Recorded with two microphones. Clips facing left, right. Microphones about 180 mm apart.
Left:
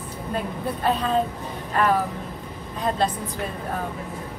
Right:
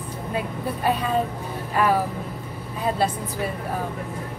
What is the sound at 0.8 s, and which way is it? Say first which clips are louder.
Speech: left 1 dB; 10° right (ahead or behind).